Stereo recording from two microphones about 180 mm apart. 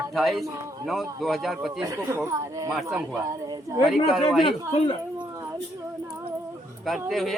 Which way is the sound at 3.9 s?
Centre (ahead or behind).